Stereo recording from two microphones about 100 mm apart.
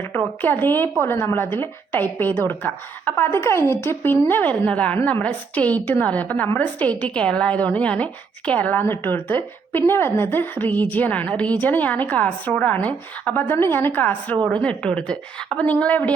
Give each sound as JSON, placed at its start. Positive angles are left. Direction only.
{"t": 0.4, "sound": "a woman's voice", "side_deg": 20}